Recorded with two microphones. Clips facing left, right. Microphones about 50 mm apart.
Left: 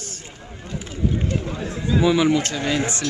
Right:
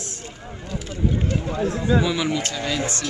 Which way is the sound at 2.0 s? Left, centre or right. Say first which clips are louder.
Left 6 dB; left.